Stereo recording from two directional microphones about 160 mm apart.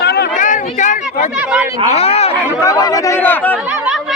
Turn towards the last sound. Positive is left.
turn(degrees=10)  # may be behind; listen again after turning